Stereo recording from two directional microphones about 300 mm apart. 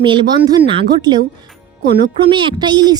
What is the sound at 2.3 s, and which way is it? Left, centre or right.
Speech, centre.